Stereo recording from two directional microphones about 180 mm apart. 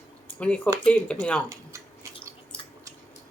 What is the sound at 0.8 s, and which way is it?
Speech, 5° left (ahead or behind).